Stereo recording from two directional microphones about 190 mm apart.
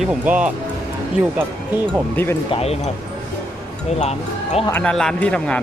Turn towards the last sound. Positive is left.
turn(degrees=5)  # may be behind; listen again after turning